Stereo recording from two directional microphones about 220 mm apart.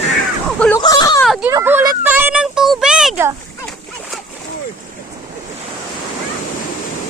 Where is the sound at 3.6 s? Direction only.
Centre (ahead or behind).